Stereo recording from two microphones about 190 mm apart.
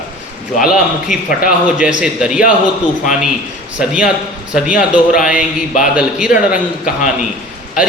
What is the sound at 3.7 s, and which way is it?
A man's voice, 5° right (ahead or behind).